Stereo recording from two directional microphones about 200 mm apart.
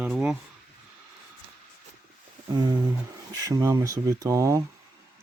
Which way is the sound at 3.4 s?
15° right (ahead or behind).